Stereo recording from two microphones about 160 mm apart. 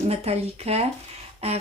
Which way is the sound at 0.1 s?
40° right (ahead or behind).